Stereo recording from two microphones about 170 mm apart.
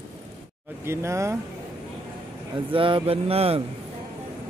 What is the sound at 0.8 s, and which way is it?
Speech, 15° right (ahead or behind).